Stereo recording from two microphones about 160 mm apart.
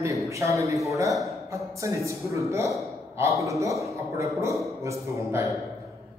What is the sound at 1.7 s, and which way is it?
A man's voice, 20° right (ahead or behind).